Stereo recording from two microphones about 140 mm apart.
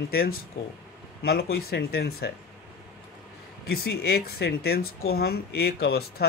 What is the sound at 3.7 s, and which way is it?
Speech, 90° left.